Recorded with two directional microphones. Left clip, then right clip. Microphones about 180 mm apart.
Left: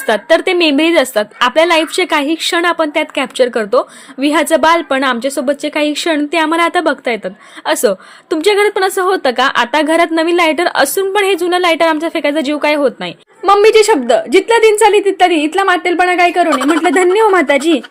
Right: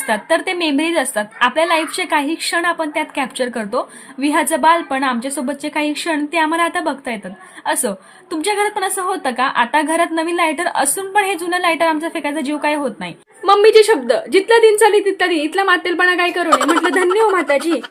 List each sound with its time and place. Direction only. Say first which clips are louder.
0.1 s a woman's voice: left 6 dB; 30° left (ahead or behind)
13.4 s a woman's voice: left 2 dB; 20° left (ahead or behind)
16.5 s a woman's voice: left 1 dB; centre (ahead or behind)
16.8 s a woman's voice: left 4 dB; 20° left (ahead or behind)